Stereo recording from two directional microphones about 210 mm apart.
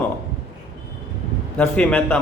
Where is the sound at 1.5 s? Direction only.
5° left (ahead or behind).